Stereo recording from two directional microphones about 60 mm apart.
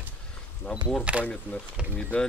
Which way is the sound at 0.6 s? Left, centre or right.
Left.